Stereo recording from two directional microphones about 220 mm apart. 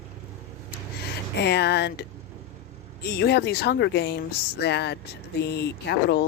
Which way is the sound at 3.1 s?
45° left (ahead or behind).